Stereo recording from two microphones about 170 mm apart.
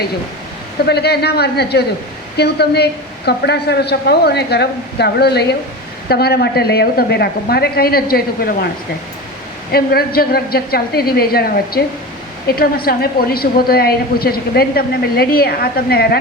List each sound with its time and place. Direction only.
0.9 s a woman's voice: 75° left (ahead or behind)
9.7 s a woman's voice: 65° left (ahead or behind)